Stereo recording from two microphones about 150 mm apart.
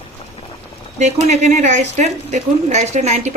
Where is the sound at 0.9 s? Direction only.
50° right (ahead or behind).